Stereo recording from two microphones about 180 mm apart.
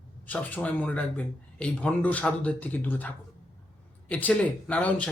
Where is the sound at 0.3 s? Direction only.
10° left (ahead or behind).